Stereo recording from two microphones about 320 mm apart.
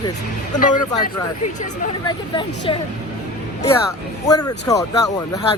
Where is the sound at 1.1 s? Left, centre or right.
Left.